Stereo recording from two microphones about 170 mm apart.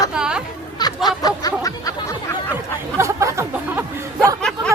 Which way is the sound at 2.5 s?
15° right (ahead or behind).